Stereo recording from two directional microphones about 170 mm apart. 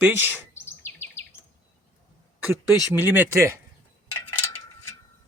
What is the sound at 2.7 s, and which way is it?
Speech, 10° right (ahead or behind).